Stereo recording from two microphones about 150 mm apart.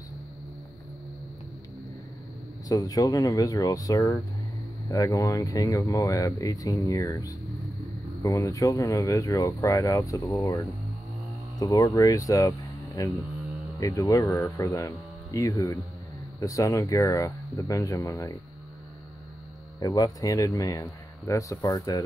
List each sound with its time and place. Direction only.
2.7 s speech: 25° left (ahead or behind)
19.8 s speech: 25° left (ahead or behind)